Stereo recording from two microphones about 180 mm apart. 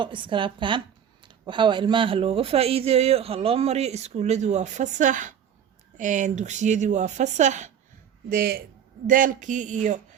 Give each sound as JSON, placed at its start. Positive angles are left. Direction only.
{"t": 0.0, "sound": "a woman's voice", "side_deg": -25}
{"t": 8.3, "sound": "speech", "side_deg": -55}